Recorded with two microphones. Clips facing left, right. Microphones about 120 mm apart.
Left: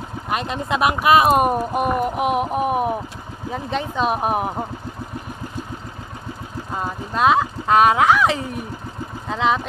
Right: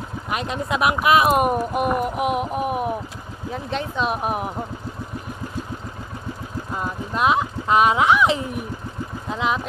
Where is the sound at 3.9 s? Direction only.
40° left (ahead or behind).